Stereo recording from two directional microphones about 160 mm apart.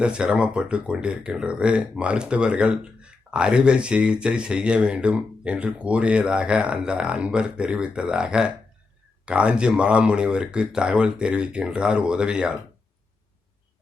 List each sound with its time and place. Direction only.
0.0 s speech: 5° right (ahead or behind)